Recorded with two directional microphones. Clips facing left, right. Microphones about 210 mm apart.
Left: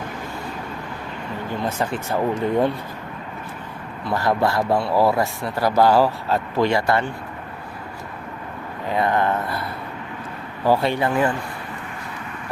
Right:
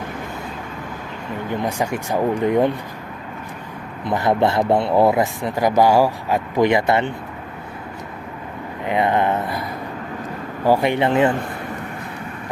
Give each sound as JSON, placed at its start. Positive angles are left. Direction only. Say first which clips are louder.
{"t": 1.6, "sound": "speech", "louder": "even", "side_deg": -15}
{"t": 4.0, "sound": "speech", "louder": "right 3 dB", "side_deg": -20}
{"t": 8.9, "sound": "speech", "louder": "right 2 dB", "side_deg": -20}